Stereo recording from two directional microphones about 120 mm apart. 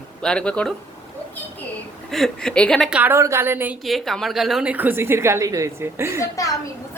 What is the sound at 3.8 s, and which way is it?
A woman's voice, centre (ahead or behind).